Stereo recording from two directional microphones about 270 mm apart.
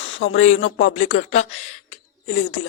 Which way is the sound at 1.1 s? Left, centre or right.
Left.